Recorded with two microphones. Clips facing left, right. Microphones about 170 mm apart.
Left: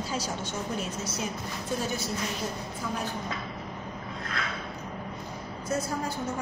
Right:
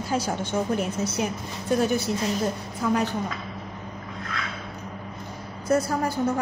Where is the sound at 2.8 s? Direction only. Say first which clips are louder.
Right 11 dB; 65° right (ahead or behind).